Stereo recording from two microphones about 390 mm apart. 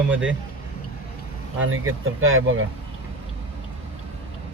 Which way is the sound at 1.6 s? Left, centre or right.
Right.